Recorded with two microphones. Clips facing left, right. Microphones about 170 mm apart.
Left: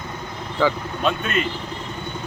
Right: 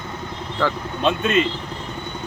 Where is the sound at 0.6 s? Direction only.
5° left (ahead or behind).